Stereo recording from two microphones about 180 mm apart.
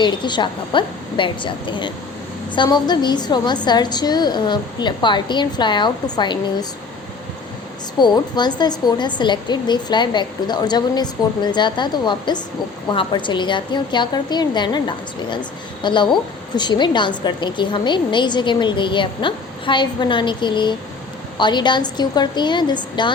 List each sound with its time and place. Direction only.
0.0 s a woman's voice: 25° left (ahead or behind)
7.9 s a woman's voice: 25° left (ahead or behind)